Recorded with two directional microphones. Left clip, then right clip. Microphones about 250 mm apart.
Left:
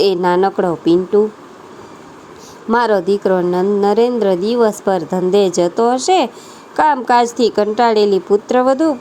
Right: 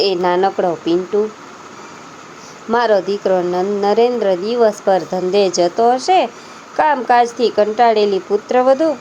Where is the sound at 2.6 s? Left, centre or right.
Left.